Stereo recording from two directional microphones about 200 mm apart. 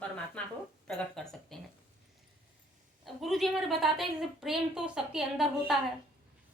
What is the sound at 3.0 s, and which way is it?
A woman's voice, centre (ahead or behind).